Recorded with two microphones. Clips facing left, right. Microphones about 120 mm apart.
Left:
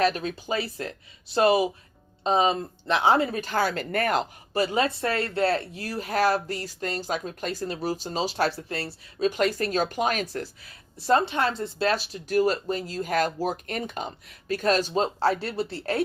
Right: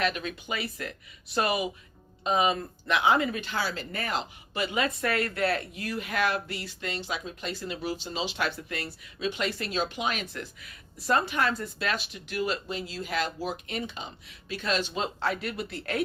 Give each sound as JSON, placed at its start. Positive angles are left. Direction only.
{"t": 0.0, "sound": "speech", "side_deg": 35}